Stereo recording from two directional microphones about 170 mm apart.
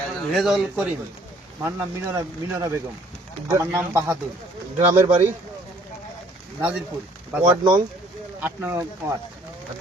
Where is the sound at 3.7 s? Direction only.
10° right (ahead or behind).